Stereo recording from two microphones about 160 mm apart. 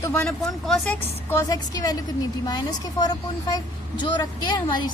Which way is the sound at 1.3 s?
20° left (ahead or behind).